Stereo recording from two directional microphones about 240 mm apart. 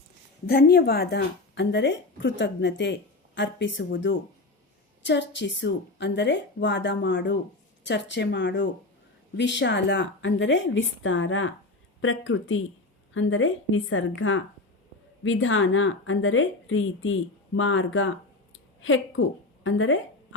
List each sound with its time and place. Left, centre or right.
0.4 s a woman's voice: left
18.5 s a sound: left
19.6 s a woman's voice: left